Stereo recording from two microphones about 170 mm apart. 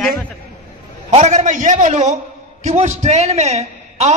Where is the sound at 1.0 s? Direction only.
40° right (ahead or behind).